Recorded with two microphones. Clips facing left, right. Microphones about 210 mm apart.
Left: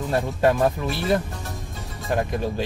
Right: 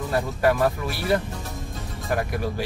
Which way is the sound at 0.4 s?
20° left (ahead or behind).